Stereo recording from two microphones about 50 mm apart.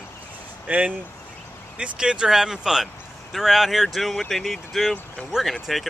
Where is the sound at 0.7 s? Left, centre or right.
Right.